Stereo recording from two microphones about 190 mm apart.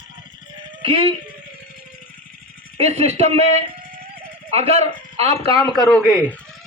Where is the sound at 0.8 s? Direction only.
30° right (ahead or behind).